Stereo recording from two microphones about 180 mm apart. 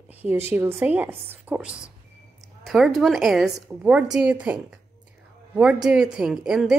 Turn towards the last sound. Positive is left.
turn(degrees=-5)  # may be behind; listen again after turning